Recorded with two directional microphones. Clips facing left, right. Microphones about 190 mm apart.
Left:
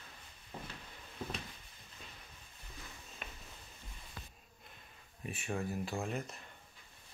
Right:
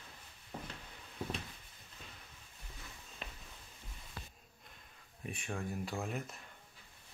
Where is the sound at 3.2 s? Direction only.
30° right (ahead or behind).